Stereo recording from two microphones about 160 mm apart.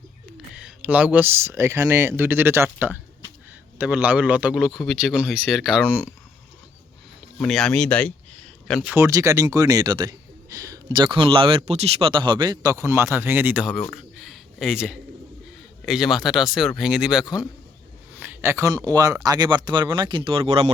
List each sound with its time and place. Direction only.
0.5 s speech: 5° right (ahead or behind)
7.3 s speech: centre (ahead or behind)
9.0 s speech: 20° right (ahead or behind)
13.9 s a sound: centre (ahead or behind)
15.9 s speech: centre (ahead or behind)
18.2 s a sound: 10° right (ahead or behind)
18.9 s speech: 20° right (ahead or behind); by 20.7 s 40° right (ahead or behind)